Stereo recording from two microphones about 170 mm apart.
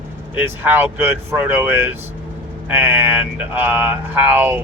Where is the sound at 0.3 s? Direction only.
10° right (ahead or behind).